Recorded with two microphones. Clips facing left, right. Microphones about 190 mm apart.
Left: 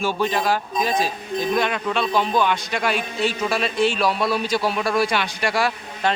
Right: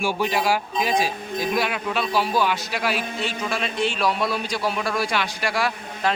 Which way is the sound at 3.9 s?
30° left (ahead or behind).